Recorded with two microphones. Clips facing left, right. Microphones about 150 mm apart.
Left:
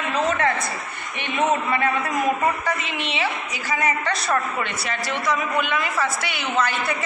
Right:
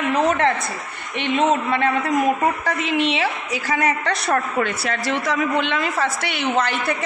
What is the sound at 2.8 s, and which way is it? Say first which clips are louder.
A woman's voice: right 6 dB; 90° right.